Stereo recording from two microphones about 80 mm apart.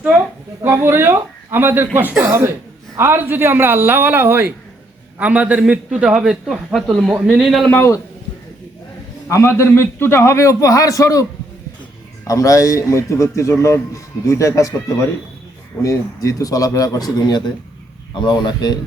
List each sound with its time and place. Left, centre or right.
0.6 s a man's voice: right
2.2 s a man's voice: right; by 7.4 s centre
7.4 s a man's voice: centre
7.7 s a man's voice: left
9.3 s a man's voice: left
12.3 s a man's voice: left
18.1 s a man's voice: left